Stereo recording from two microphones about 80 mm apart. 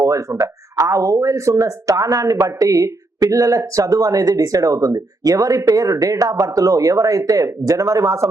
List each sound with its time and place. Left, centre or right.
0.0 s speech: right